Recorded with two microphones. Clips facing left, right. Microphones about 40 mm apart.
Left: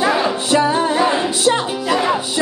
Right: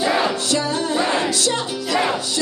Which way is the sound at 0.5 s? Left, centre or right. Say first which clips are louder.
Left 6 dB; left.